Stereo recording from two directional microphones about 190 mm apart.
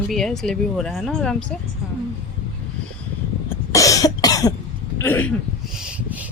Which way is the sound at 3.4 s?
15° left (ahead or behind).